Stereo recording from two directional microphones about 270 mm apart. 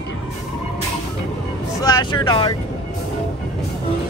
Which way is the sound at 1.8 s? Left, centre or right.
Centre.